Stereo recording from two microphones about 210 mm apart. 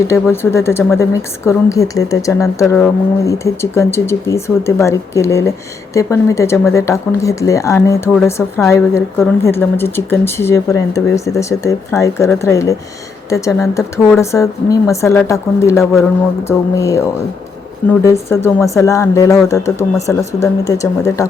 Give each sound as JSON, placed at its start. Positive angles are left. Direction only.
{"t": 0.1, "sound": "speech", "side_deg": 10}